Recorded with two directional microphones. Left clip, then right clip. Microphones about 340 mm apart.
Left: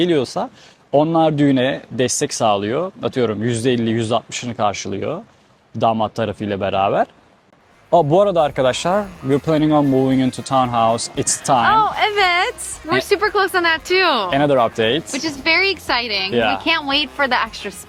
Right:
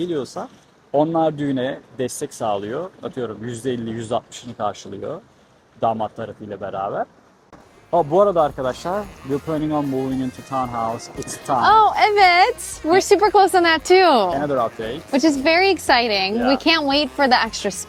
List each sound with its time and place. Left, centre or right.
0.0 s speech: left
7.9 s speech: left
11.6 s a woman's voice: right
14.4 s speech: left
15.1 s a woman's voice: right